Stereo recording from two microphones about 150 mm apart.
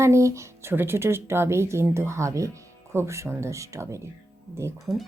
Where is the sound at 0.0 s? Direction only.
20° right (ahead or behind).